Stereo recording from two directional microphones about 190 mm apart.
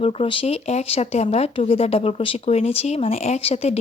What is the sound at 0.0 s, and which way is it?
Speech, 30° left (ahead or behind).